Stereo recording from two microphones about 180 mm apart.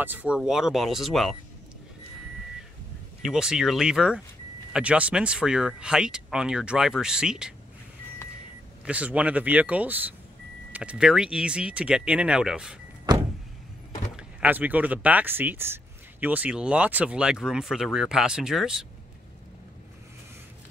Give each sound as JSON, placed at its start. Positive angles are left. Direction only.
{"t": 0.0, "sound": "speech", "side_deg": -10}
{"t": 3.2, "sound": "speech", "side_deg": -5}
{"t": 8.8, "sound": "speech", "side_deg": -5}
{"t": 13.1, "sound": "vehicle", "side_deg": -20}
{"t": 14.1, "sound": "speech", "side_deg": -10}